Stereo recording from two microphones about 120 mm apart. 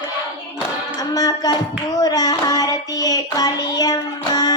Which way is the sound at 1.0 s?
30° left (ahead or behind).